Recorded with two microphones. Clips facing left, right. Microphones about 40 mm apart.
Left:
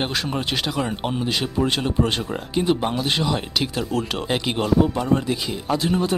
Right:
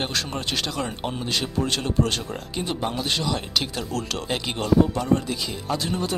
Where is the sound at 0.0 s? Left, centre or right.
Centre.